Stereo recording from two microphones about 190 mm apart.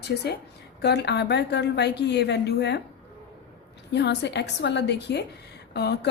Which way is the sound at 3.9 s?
65° left (ahead or behind).